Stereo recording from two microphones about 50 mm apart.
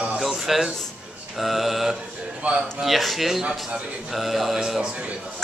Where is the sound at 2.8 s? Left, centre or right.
Centre.